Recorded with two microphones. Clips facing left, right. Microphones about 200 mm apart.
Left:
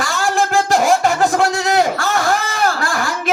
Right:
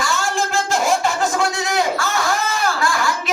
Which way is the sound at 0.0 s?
55° left (ahead or behind).